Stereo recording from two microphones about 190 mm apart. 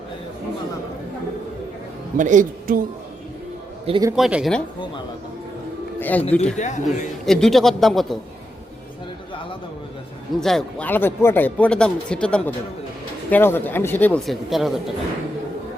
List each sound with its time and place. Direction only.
2.1 s speech: 40° right (ahead or behind)
3.8 s a man's voice: 25° right (ahead or behind)
4.1 s speech: 5° right (ahead or behind)
6.0 s speech: 10° left (ahead or behind)
6.6 s a man's voice: 40° left (ahead or behind)
7.3 s speech: centre (ahead or behind)
10.4 s speech: centre (ahead or behind)